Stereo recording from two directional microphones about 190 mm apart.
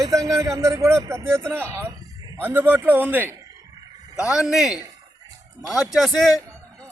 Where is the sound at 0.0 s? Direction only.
20° right (ahead or behind).